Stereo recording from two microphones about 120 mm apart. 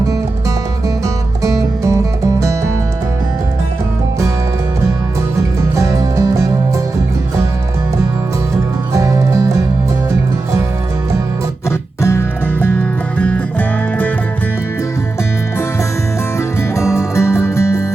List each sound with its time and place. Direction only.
1.0 s music: 25° right (ahead or behind)
5.7 s music: 25° right (ahead or behind)
8.9 s music: 25° right (ahead or behind)
12.0 s music: 20° left (ahead or behind)
16.4 s music: 25° left (ahead or behind)